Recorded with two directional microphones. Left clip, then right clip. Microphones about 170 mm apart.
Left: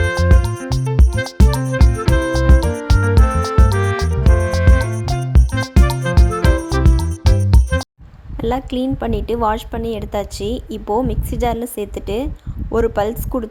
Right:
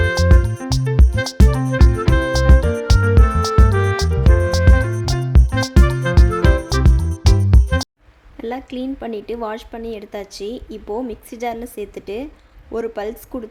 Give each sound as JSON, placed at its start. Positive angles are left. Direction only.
{"t": 0.0, "sound": "music", "side_deg": 0}
{"t": 8.4, "sound": "a woman's voice", "side_deg": 20}